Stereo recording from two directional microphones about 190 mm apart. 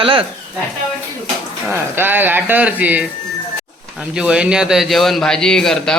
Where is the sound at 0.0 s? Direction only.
25° right (ahead or behind).